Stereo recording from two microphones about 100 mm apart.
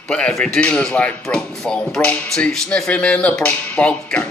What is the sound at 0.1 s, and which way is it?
Music, 10° left (ahead or behind).